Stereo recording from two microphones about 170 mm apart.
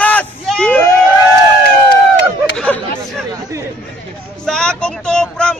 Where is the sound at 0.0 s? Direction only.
10° left (ahead or behind).